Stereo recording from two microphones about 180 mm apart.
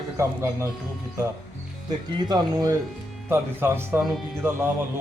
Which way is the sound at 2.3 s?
20° right (ahead or behind).